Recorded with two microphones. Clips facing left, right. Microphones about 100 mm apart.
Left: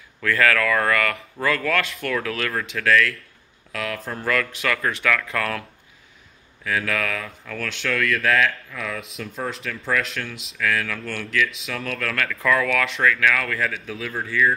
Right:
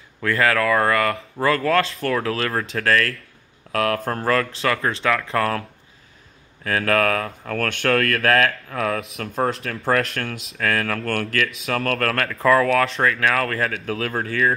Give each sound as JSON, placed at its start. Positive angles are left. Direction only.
{"t": 0.2, "sound": "speech", "side_deg": -25}
{"t": 3.7, "sound": "speech", "side_deg": -50}
{"t": 4.3, "sound": "speech", "side_deg": -30}
{"t": 6.6, "sound": "speech", "side_deg": -50}
{"t": 9.3, "sound": "speech", "side_deg": -45}
{"t": 12.3, "sound": "speech", "side_deg": -35}
{"t": 13.9, "sound": "speech", "side_deg": -60}